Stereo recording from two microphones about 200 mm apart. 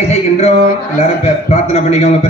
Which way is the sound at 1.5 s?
30° left (ahead or behind).